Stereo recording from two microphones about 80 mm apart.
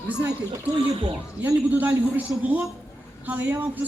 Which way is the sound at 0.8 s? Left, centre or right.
Right.